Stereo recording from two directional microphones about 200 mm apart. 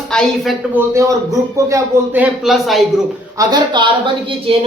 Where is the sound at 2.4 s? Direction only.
Centre (ahead or behind).